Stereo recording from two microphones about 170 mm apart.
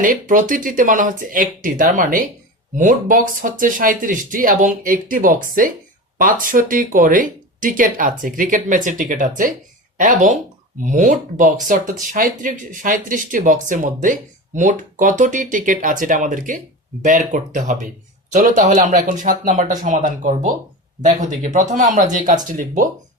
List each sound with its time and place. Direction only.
0.0 s speech: 50° right (ahead or behind)